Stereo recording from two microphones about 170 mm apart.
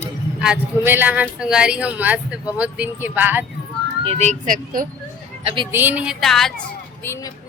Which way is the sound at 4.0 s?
35° right (ahead or behind).